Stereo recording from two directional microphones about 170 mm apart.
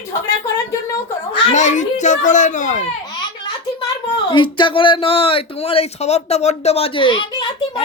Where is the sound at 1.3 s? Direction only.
45° left (ahead or behind).